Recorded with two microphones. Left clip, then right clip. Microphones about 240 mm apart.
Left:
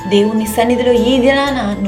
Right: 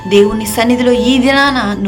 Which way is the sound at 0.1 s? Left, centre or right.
Centre.